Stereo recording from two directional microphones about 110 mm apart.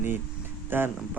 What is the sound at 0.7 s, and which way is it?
Speech, 20° right (ahead or behind).